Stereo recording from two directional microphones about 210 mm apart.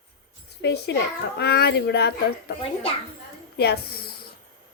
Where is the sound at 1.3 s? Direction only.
50° left (ahead or behind).